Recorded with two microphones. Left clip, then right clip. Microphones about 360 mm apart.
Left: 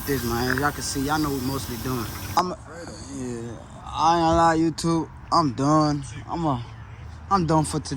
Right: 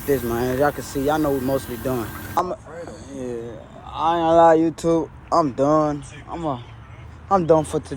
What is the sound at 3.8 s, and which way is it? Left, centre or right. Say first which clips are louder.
Speech: even; centre.